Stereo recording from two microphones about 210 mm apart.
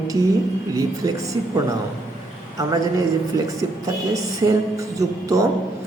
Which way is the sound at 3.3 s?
15° right (ahead or behind).